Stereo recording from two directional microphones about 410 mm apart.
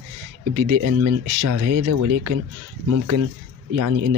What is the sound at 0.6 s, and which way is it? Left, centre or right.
Speech, right.